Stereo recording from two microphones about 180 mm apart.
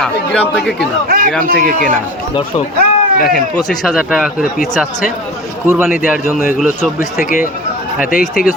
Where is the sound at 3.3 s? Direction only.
Centre (ahead or behind).